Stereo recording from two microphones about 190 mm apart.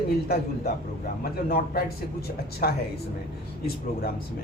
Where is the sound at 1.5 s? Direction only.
55° left (ahead or behind).